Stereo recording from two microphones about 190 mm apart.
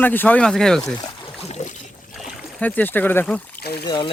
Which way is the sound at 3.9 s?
25° left (ahead or behind).